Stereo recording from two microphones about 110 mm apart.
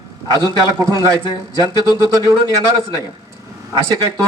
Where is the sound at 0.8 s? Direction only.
30° right (ahead or behind).